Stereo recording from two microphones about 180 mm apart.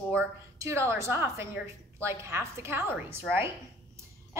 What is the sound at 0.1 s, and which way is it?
A woman's voice, 15° right (ahead or behind).